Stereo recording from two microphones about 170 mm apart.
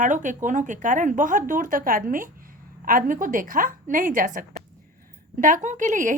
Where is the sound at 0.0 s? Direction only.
50° right (ahead or behind).